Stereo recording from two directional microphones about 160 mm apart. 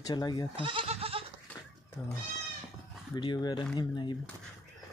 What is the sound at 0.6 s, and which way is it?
Speech, 35° right (ahead or behind).